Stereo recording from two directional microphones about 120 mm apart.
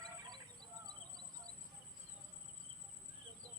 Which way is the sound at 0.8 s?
35° right (ahead or behind).